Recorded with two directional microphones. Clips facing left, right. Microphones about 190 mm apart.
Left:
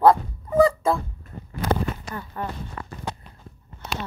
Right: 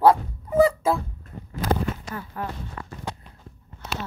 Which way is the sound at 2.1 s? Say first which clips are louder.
Left 1 dB; centre (ahead or behind).